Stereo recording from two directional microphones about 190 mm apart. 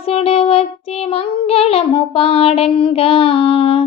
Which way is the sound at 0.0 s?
30° left (ahead or behind).